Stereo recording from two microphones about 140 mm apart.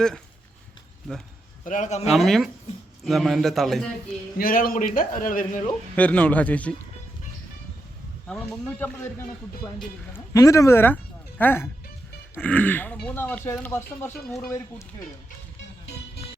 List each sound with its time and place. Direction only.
1.6 s a man's voice: 65° left (ahead or behind)
2.0 s a man's voice: centre (ahead or behind)
4.4 s a man's voice: 90° left
4.9 s speech: 75° left (ahead or behind)
6.0 s speech: 10° left (ahead or behind)
8.3 s a man's voice: 5° left (ahead or behind)
10.1 s speech: 20° left (ahead or behind)